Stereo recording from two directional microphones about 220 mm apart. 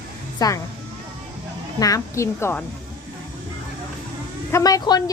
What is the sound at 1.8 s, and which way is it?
Speech, 15° left (ahead or behind).